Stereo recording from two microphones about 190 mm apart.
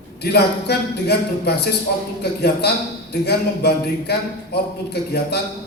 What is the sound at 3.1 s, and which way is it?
Speech, 60° left (ahead or behind).